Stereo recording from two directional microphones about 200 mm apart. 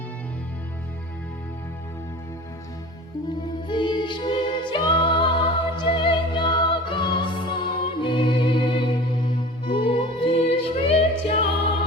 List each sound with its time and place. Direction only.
3.7 s music: 25° left (ahead or behind)